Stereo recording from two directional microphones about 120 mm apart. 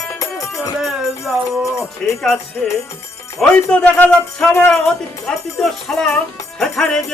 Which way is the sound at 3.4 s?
10° left (ahead or behind).